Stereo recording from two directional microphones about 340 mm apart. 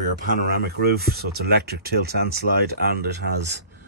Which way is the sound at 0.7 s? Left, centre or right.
Right.